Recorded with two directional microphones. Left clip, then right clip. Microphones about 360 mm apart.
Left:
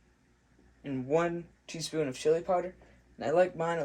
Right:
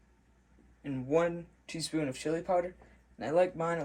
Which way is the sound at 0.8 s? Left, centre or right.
Centre.